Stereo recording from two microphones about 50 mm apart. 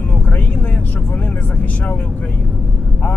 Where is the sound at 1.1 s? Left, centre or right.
Left.